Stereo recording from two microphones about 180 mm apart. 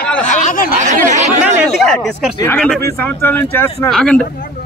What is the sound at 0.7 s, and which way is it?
Chatter, 40° right (ahead or behind).